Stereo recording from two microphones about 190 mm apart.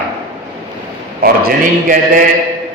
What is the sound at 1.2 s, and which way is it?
Speech, 50° right (ahead or behind).